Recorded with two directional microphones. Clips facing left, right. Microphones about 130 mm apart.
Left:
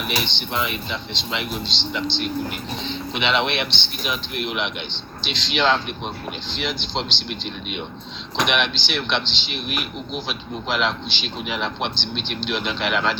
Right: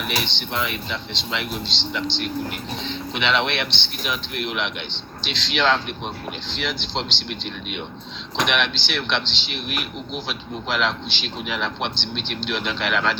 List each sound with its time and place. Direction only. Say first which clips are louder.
0.0 s speech: left 1 dB; 15° left (ahead or behind)